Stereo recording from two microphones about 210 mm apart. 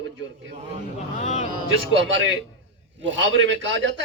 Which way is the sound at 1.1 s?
30° left (ahead or behind).